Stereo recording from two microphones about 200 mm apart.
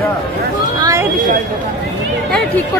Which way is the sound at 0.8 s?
15° right (ahead or behind).